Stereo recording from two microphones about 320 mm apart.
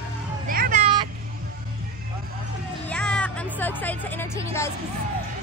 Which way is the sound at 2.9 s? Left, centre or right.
Centre.